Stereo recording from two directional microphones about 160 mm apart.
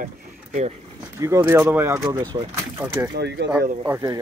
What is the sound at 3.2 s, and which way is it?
Speech, 90° right.